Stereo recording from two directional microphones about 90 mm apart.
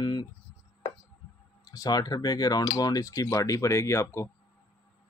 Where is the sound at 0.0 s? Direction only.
55° left (ahead or behind).